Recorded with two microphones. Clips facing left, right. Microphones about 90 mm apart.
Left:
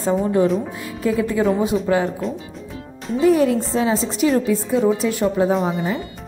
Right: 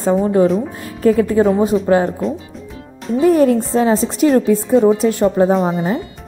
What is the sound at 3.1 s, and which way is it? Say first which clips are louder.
A woman's voice: right 4 dB; 45° right (ahead or behind).